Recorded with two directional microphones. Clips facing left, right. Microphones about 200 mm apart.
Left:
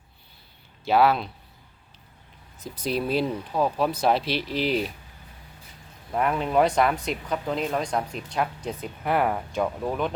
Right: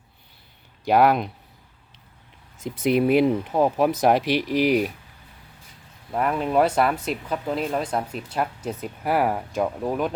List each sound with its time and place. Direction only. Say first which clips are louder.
0.9 s speech: right 2 dB; 15° right (ahead or behind)
2.6 s speech: right 7 dB; 20° right (ahead or behind)
6.1 s speech: right 1 dB; centre (ahead or behind)